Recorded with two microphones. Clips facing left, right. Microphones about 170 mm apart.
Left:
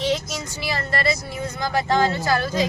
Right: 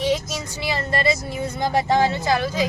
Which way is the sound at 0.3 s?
20° right (ahead or behind).